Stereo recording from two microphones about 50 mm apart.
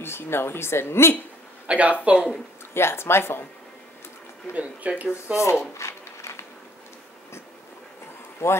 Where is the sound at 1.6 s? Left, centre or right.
Right.